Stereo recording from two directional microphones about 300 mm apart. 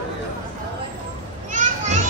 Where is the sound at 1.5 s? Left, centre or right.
Right.